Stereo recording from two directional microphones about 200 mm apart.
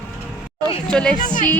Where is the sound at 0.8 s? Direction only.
5° left (ahead or behind).